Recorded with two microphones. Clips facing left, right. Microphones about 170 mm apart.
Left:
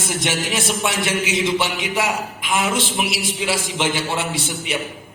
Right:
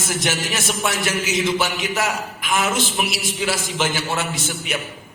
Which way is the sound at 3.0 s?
20° left (ahead or behind).